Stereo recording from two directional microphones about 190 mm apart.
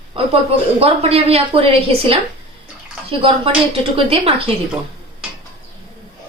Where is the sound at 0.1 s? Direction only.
30° right (ahead or behind).